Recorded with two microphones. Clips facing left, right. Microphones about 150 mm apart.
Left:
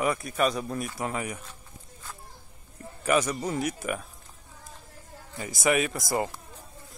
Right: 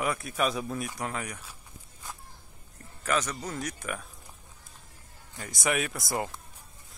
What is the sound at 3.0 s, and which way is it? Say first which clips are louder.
Speech: left 5 dB; 10° left (ahead or behind).